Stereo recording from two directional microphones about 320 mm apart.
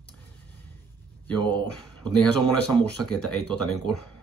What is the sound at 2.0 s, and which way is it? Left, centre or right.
Speech, centre.